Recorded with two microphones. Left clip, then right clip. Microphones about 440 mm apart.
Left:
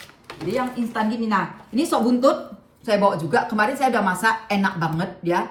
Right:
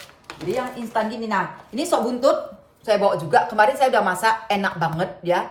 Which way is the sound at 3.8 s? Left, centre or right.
Right.